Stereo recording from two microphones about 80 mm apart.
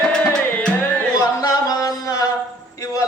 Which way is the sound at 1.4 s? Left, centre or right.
Left.